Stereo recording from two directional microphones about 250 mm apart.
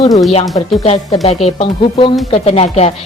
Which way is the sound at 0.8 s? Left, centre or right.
Left.